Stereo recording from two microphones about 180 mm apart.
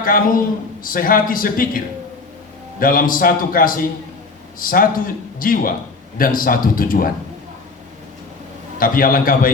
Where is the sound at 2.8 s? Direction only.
50° left (ahead or behind).